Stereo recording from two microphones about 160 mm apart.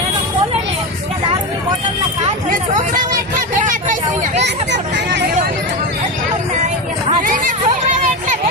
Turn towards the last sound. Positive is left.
turn(degrees=-55)  # may be behind; listen again after turning